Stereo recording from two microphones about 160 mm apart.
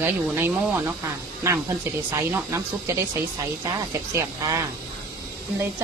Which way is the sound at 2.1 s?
20° right (ahead or behind).